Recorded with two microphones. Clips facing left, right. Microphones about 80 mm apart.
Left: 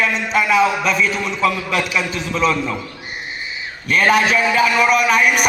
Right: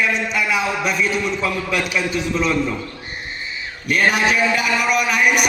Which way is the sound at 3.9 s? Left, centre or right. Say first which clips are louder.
Left 2 dB; left.